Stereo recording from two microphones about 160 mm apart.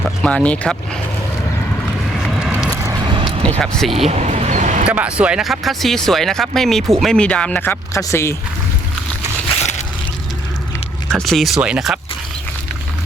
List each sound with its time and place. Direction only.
0.2 s speech: 5° left (ahead or behind)
2.1 s vehicle: centre (ahead or behind)
2.6 s vehicle: 20° right (ahead or behind)
3.6 s speech: 5° left (ahead or behind)
3.9 s vehicle: 40° right (ahead or behind)
4.9 s speech: 5° right (ahead or behind); by 8.4 s 15° left (ahead or behind)
11.1 s speech: centre (ahead or behind)